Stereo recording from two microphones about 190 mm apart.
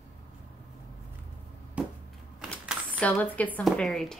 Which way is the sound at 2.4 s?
5° left (ahead or behind).